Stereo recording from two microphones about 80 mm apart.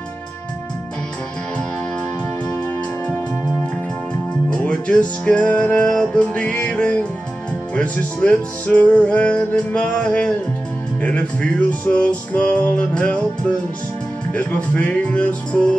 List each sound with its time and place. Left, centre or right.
4.5 s music: centre
14.3 s music: centre